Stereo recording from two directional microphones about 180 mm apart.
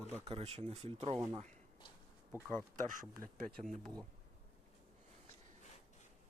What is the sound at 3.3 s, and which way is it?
Speech, 45° right (ahead or behind).